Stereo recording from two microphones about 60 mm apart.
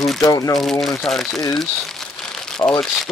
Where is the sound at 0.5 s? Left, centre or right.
Centre.